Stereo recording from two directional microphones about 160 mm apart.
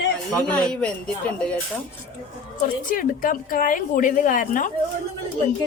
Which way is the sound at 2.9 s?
60° left (ahead or behind).